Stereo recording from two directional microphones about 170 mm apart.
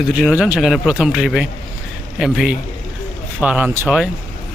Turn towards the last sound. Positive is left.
turn(degrees=-10)  # may be behind; listen again after turning